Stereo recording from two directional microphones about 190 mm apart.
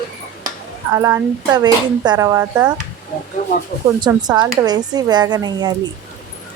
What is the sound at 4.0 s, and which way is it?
Speech, 20° right (ahead or behind).